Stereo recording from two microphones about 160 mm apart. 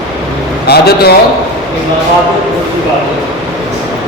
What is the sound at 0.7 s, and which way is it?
Speech, 90° left.